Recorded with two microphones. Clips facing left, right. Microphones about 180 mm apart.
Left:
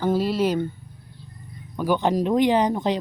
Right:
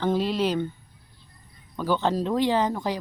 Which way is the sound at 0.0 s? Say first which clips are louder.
Left 2 dB; 10° left (ahead or behind).